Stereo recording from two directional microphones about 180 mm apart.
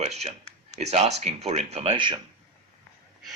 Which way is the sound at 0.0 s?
35° right (ahead or behind).